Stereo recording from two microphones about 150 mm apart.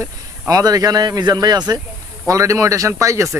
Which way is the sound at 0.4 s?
25° right (ahead or behind).